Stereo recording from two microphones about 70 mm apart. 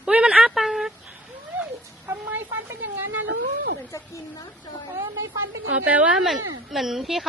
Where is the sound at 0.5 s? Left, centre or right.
Centre.